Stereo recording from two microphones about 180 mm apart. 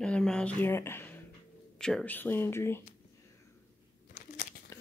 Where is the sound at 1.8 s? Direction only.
5° left (ahead or behind).